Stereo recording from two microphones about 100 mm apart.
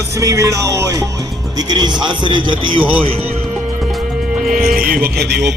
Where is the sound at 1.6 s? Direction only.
45° right (ahead or behind).